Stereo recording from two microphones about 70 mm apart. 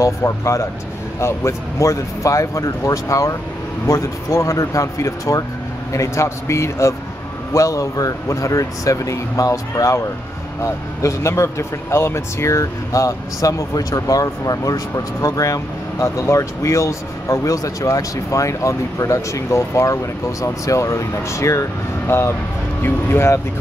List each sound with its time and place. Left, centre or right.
0.0 s speech: left